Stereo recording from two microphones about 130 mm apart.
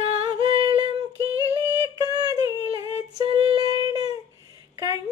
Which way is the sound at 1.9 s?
25° right (ahead or behind).